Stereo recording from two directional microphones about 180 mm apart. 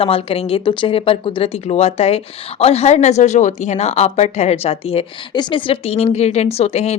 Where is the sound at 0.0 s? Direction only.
30° left (ahead or behind).